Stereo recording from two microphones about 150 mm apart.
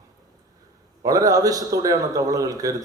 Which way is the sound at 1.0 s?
25° right (ahead or behind).